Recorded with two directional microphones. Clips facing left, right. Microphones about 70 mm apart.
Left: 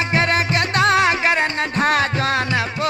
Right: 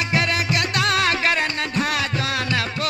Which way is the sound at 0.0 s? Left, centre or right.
Left.